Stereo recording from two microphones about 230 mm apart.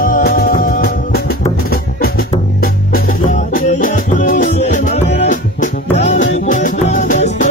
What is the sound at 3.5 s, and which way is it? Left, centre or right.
Music, left.